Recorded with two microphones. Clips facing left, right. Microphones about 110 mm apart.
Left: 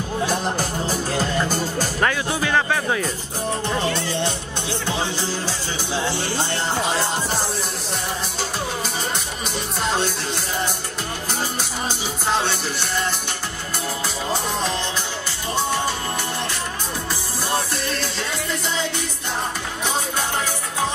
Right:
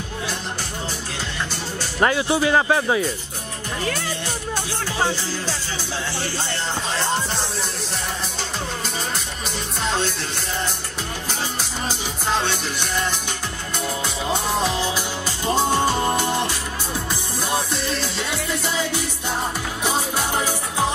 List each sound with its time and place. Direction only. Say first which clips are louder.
0.3 s music: left 7 dB; 45° left (ahead or behind)
2.0 s speech: right 5 dB; 15° right (ahead or behind)
3.8 s speech: left 3 dB; 25° left (ahead or behind)
9.8 s music: left 1 dB; 5° left (ahead or behind)
12.3 s music: left 1 dB; 5° left (ahead or behind)
14.6 s music: right 2 dB; 5° right (ahead or behind)
16.1 s music: right 5 dB; 20° right (ahead or behind)
17.5 s music: even; centre (ahead or behind)